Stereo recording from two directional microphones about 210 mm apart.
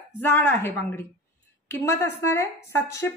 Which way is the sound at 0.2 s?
10° left (ahead or behind).